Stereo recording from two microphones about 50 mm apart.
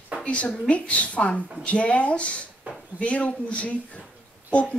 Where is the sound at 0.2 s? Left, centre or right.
Left.